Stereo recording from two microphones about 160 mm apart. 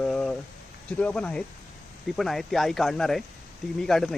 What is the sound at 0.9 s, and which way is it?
Speech, 5° left (ahead or behind).